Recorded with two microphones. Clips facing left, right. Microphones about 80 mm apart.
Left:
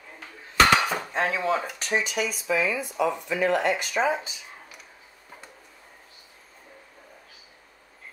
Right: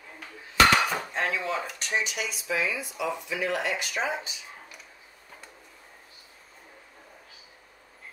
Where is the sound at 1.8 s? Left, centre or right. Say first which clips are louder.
Left 5 dB; left.